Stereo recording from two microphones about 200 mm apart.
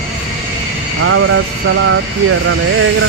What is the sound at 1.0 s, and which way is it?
Vehicle, 90° right.